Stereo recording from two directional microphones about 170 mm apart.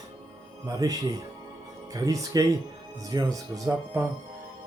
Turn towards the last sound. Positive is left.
turn(degrees=-20)  # may be behind; listen again after turning